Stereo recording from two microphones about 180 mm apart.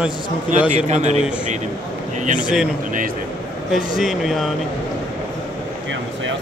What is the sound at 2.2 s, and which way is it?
Speech, 45° right (ahead or behind).